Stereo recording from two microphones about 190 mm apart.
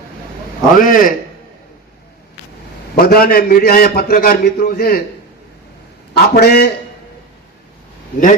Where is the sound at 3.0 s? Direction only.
55° left (ahead or behind).